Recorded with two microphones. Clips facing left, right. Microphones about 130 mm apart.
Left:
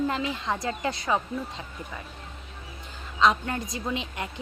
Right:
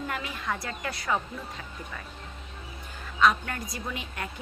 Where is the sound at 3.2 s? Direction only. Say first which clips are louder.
Left 1 dB; 25° left (ahead or behind).